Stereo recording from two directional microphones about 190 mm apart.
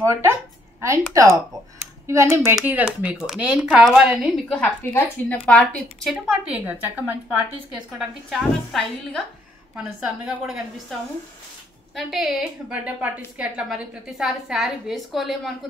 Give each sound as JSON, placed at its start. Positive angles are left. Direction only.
{"t": 0.0, "sound": "a woman's voice", "side_deg": -15}
{"t": 6.2, "sound": "a woman's voice", "side_deg": -5}